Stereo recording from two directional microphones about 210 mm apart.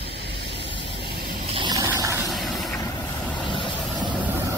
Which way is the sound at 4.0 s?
20° right (ahead or behind).